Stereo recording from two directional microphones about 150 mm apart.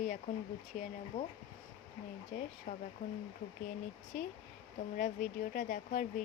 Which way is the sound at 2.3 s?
65° left (ahead or behind).